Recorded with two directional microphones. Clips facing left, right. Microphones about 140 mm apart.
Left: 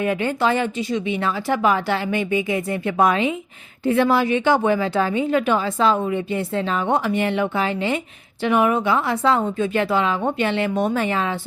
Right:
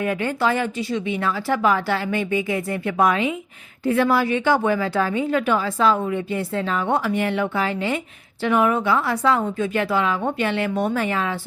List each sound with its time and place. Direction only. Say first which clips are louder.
0.0 s a woman's voice: left 1 dB; 20° left (ahead or behind)